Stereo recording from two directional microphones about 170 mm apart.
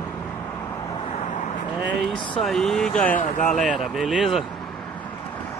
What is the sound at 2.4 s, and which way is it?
Speech, centre (ahead or behind).